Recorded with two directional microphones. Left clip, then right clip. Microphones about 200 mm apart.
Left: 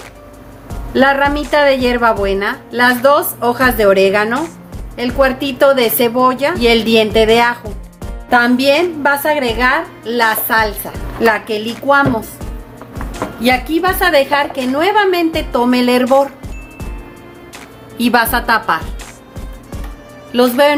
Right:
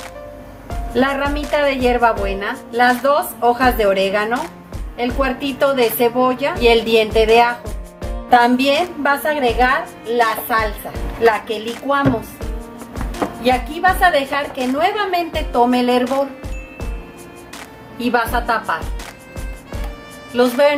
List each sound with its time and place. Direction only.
0.9 s a woman's voice: 30° left (ahead or behind)
13.4 s a woman's voice: 50° left (ahead or behind)
17.9 s a woman's voice: 55° left (ahead or behind)
20.3 s a woman's voice: 35° left (ahead or behind)